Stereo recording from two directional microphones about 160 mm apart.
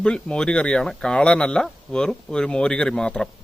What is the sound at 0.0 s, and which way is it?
Speech, 5° left (ahead or behind).